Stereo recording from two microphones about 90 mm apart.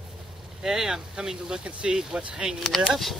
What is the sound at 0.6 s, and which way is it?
Speech, 5° right (ahead or behind).